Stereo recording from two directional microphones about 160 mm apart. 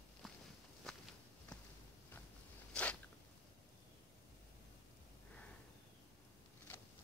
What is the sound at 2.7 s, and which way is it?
Zipper, 10° left (ahead or behind).